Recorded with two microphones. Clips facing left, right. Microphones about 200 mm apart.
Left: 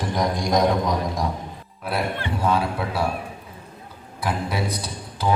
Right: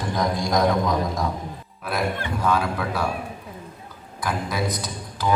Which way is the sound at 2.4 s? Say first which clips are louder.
Left 1 dB; 30° left (ahead or behind).